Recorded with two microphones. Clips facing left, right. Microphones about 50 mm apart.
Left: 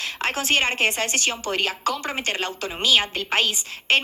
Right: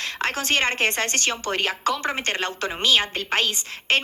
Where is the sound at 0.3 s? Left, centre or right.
Right.